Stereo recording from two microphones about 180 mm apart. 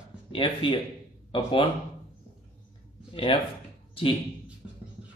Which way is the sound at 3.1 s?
30° left (ahead or behind).